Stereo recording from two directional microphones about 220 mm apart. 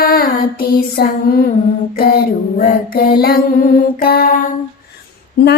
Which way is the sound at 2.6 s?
45° left (ahead or behind).